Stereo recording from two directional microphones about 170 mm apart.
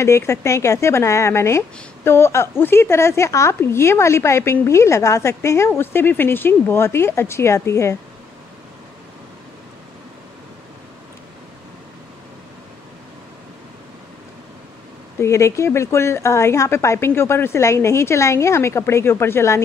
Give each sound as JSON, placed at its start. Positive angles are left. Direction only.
{"t": 0.0, "sound": "a woman's voice", "side_deg": 15}
{"t": 15.1, "sound": "a woman's voice", "side_deg": 15}